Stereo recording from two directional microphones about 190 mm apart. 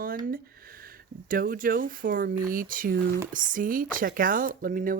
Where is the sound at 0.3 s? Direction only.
50° right (ahead or behind).